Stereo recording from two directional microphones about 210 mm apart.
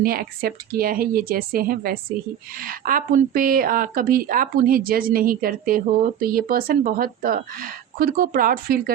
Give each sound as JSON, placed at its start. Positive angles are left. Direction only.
{"t": 0.0, "sound": "speech", "side_deg": -45}